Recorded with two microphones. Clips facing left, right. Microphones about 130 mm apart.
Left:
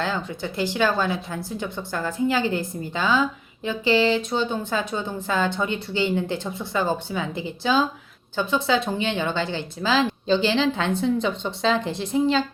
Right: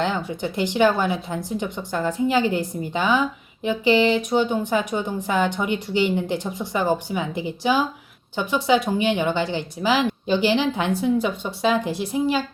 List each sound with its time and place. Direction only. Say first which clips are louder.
0.2 s a woman's voice: right 2 dB; 15° right (ahead or behind)